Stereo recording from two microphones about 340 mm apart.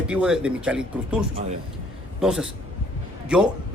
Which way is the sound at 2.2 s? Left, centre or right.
Centre.